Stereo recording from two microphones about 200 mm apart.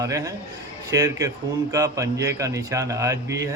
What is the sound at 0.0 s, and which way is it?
A man's voice, 15° right (ahead or behind).